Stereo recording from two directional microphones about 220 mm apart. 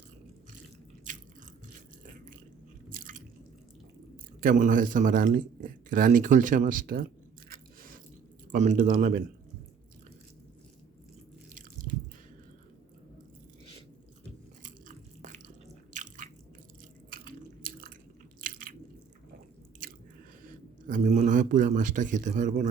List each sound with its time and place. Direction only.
1.1 s biting: 35° right (ahead or behind)
2.9 s drip: 40° right (ahead or behind)
4.4 s speech: 40° right (ahead or behind)
7.5 s biting: 40° right (ahead or behind)
8.5 s speech: 35° right (ahead or behind)
14.6 s biting: 35° right (ahead or behind)
20.8 s speech: 35° right (ahead or behind)